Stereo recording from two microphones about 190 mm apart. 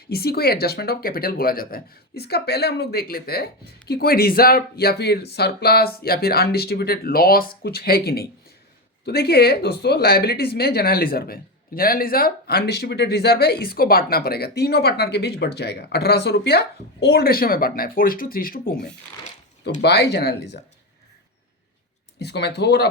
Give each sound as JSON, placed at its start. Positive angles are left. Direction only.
{"t": 0.1, "sound": "speech", "side_deg": 55}
{"t": 19.8, "sound": "speech", "side_deg": 60}
{"t": 22.2, "sound": "speech", "side_deg": 60}